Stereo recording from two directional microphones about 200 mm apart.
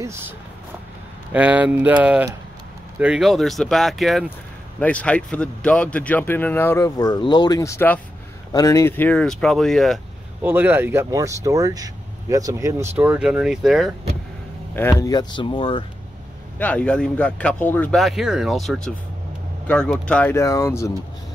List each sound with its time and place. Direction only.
1.3 s a man's voice: 5° right (ahead or behind)
10.4 s speech: 10° right (ahead or behind)
14.8 s speech: 15° left (ahead or behind)
16.5 s a man's voice: 5° left (ahead or behind)